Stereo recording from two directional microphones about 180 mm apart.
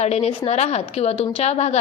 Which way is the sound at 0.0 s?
35° left (ahead or behind).